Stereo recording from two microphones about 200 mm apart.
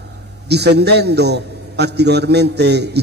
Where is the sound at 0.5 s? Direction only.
55° right (ahead or behind).